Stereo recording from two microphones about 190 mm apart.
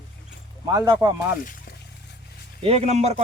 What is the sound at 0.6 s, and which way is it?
Speech, 20° right (ahead or behind).